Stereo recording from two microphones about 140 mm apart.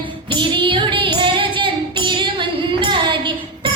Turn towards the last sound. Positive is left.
turn(degrees=-35)  # may be behind; listen again after turning